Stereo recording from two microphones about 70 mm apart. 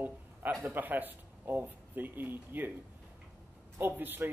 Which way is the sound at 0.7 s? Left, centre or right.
Right.